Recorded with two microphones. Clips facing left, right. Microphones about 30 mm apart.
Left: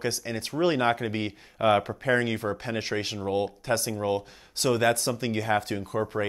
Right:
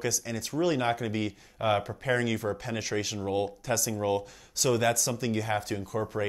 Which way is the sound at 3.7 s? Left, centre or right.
Left.